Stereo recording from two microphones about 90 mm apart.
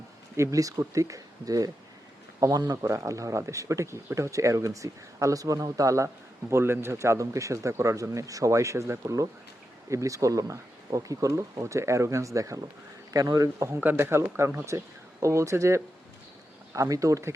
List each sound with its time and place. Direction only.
0.3 s speech: 35° right (ahead or behind)
2.8 s speech: 35° right (ahead or behind)
6.5 s speech: 25° right (ahead or behind); by 13.7 s 40° right (ahead or behind)
13.7 s speech: 25° right (ahead or behind)